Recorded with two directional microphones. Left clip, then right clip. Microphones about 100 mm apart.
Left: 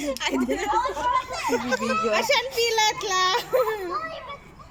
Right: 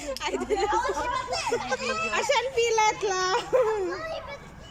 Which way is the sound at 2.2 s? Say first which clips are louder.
Left 2 dB; 35° right (ahead or behind).